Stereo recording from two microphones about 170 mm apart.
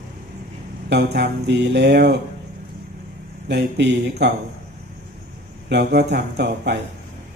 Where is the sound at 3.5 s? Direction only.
90° right.